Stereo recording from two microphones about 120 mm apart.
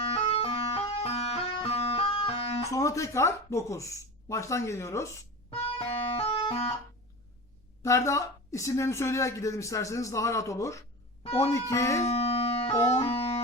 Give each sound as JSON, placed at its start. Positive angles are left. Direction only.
{"t": 0.0, "sound": "music", "side_deg": 55}
{"t": 1.0, "sound": "music", "side_deg": 60}
{"t": 2.6, "sound": "speech", "side_deg": 25}
{"t": 5.5, "sound": "music", "side_deg": 55}
{"t": 7.8, "sound": "speech", "side_deg": 25}
{"t": 12.0, "sound": "music", "side_deg": 55}